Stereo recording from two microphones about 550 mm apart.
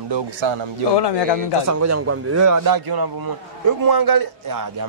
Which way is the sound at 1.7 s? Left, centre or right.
Right.